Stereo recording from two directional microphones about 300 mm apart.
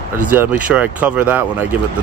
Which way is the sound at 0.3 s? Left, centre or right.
Centre.